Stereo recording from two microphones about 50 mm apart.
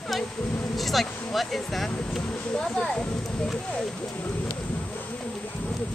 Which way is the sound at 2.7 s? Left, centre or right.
Centre.